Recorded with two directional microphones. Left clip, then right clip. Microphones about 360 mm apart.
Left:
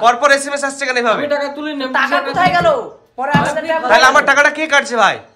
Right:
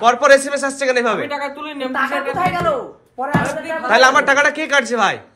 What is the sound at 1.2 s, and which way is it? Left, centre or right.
Speech, centre.